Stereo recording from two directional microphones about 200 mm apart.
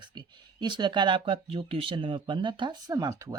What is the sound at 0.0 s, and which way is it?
Speech, 20° right (ahead or behind).